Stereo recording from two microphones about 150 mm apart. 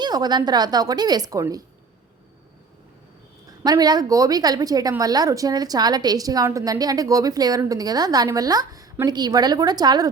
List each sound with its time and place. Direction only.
0.0 s speech: 25° right (ahead or behind)
3.6 s speech: 25° right (ahead or behind)